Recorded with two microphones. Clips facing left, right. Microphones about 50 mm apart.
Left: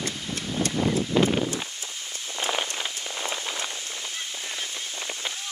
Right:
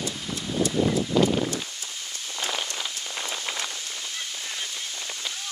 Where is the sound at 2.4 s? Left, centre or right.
Centre.